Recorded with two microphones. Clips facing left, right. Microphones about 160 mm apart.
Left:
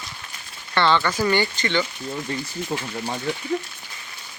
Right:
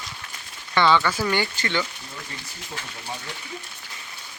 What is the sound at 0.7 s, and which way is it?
Speech, 5° right (ahead or behind).